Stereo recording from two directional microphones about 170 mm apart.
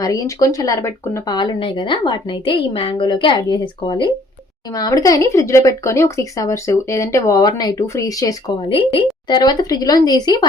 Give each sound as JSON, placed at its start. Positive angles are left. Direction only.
{"t": 0.0, "sound": "speech", "side_deg": 20}
{"t": 8.5, "sound": "speech", "side_deg": 30}